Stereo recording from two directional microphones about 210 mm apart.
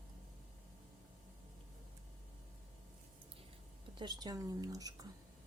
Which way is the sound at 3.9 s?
20° right (ahead or behind).